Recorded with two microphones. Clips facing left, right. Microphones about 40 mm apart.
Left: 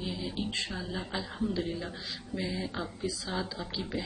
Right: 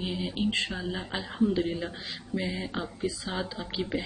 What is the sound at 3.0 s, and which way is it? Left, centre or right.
Speech, right.